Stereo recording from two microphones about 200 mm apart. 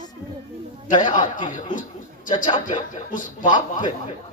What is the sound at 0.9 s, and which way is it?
A man's voice, 40° left (ahead or behind).